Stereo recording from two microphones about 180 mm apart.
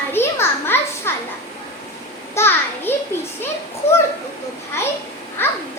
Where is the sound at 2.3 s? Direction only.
15° left (ahead or behind).